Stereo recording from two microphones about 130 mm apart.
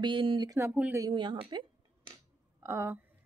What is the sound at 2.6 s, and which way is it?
Speech, 20° right (ahead or behind).